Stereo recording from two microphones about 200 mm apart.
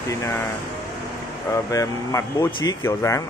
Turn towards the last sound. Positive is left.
turn(degrees=15)  # may be behind; listen again after turning